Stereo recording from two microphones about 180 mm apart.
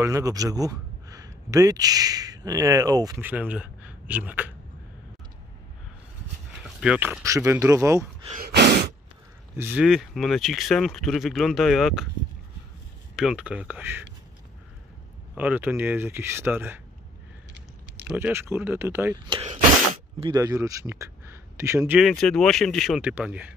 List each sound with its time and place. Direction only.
0.0 s speech: 20° right (ahead or behind)
3.3 s speech: 10° right (ahead or behind)
6.8 s speech: 5° right (ahead or behind)
8.4 s gasp: 65° right (ahead or behind)
9.6 s speech: 10° right (ahead or behind)
13.1 s speech: centre (ahead or behind)
15.3 s speech: 10° right (ahead or behind)
17.9 s speech: 10° right (ahead or behind)
19.2 s a man's voice: 30° right (ahead or behind); by 22.0 s 10° right (ahead or behind)
22.0 s speech: centre (ahead or behind)